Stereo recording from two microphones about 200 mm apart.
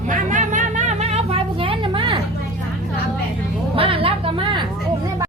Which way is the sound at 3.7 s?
25° right (ahead or behind).